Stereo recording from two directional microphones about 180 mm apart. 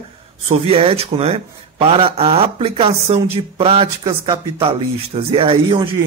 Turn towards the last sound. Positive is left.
turn(degrees=-30)  # may be behind; listen again after turning